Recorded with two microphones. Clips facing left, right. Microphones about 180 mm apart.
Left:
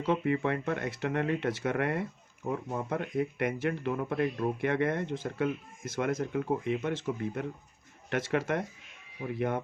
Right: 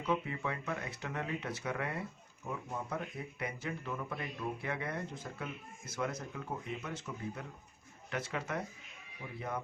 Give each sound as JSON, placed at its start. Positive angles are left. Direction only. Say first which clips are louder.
{"t": 0.0, "sound": "speech", "louder": "left 7 dB", "side_deg": 65}
{"t": 1.6, "sound": "speech", "louder": "left 7 dB", "side_deg": 65}
{"t": 2.5, "sound": "speech", "louder": "left 7 dB", "side_deg": 50}
{"t": 3.0, "sound": "speech", "louder": "left 11 dB", "side_deg": 80}
{"t": 8.1, "sound": "speech", "louder": "left 8 dB", "side_deg": 90}